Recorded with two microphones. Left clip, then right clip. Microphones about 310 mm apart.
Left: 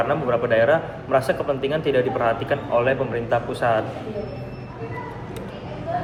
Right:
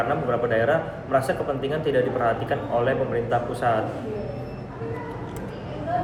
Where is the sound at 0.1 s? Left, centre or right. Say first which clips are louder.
Left 3 dB; centre.